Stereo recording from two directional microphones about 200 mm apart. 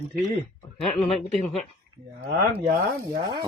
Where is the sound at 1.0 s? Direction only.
30° left (ahead or behind).